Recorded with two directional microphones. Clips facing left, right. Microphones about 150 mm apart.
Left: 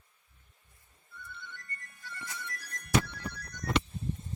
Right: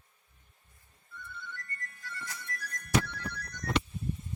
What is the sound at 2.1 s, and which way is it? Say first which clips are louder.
Music: even; 25° left (ahead or behind).